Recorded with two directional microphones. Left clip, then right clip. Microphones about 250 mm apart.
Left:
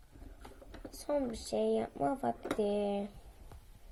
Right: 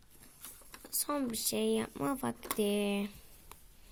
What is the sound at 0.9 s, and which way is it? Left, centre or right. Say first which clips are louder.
Speech: left 1 dB; right.